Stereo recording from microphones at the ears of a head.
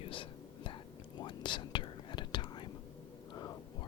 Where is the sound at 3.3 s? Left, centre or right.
Left.